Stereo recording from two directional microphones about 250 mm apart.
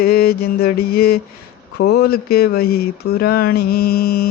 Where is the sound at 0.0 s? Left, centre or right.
Left.